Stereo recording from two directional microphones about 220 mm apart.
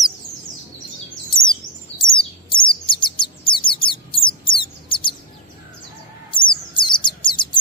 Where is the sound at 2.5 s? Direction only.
20° left (ahead or behind).